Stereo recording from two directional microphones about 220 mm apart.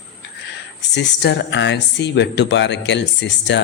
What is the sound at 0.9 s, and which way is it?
Speech, 50° left (ahead or behind).